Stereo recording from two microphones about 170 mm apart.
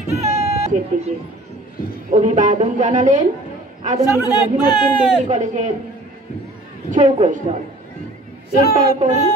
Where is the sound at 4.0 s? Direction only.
20° left (ahead or behind).